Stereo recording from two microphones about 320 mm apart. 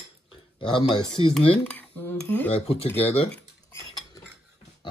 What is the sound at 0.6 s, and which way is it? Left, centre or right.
A man's voice, centre.